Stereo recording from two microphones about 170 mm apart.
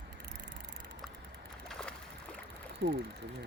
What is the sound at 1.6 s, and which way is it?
Boat, centre (ahead or behind).